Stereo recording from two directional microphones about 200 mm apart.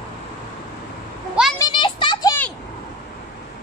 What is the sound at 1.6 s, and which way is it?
Children playing, 25° left (ahead or behind).